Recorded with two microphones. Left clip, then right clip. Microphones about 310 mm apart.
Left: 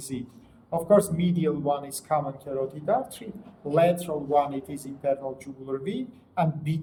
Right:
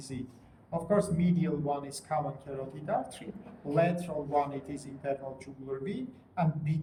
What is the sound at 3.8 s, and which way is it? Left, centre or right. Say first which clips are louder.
Speech: left 7 dB; left.